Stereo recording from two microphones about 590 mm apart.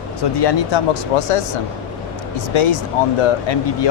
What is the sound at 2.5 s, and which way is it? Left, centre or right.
Speech, left.